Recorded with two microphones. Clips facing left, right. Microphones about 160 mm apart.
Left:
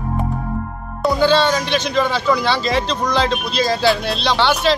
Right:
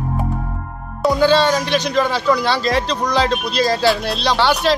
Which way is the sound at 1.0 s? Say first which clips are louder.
Right 1 dB; 5° right (ahead or behind).